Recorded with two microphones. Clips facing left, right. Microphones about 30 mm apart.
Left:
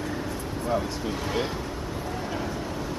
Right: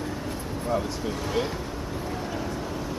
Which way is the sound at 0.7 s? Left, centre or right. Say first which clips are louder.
Even; centre.